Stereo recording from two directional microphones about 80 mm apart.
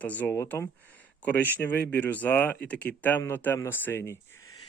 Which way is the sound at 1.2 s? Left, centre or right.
Left.